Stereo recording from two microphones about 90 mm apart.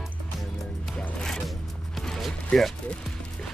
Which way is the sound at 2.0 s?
5° left (ahead or behind).